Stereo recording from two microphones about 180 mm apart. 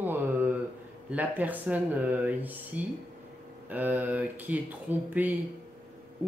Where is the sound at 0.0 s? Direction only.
10° right (ahead or behind).